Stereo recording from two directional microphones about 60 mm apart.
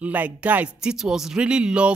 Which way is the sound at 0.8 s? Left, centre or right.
Centre.